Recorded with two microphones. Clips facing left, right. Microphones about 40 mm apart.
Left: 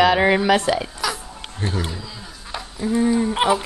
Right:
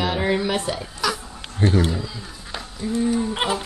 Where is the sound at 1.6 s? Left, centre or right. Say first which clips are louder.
Right 7 dB; right.